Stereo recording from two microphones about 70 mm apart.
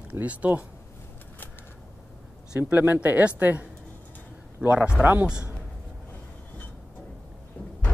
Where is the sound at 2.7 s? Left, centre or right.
Right.